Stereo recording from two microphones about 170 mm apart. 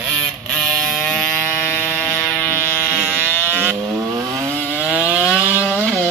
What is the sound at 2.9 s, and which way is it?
Vehicle, 10° right (ahead or behind).